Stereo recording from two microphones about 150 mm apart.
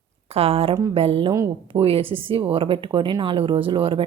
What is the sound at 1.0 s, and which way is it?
Speech, 40° right (ahead or behind).